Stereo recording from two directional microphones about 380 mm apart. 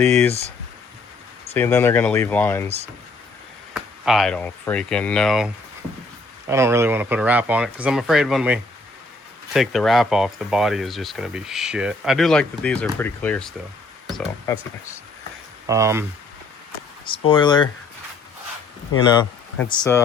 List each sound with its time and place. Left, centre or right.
0.0 s speech: centre
1.5 s speech: centre
2.6 s speech: centre
4.0 s speech: centre
6.5 s speech: centre
15.6 s speech: centre
17.1 s speech: centre
19.0 s speech: centre